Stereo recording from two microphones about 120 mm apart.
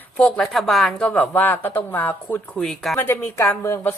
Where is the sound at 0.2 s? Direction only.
5° left (ahead or behind).